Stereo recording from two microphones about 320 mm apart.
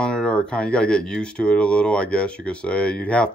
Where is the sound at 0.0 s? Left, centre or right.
Centre.